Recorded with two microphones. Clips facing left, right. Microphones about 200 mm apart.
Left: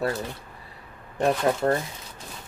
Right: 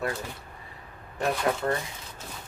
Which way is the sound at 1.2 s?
35° left (ahead or behind).